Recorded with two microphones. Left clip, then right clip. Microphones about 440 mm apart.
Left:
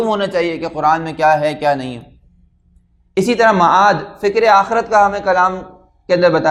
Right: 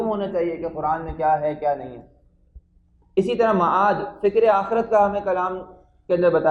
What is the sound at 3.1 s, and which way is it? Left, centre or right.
A woman's voice, left.